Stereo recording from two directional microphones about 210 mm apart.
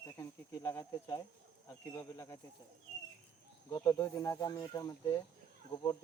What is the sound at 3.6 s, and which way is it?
Speech, 15° left (ahead or behind).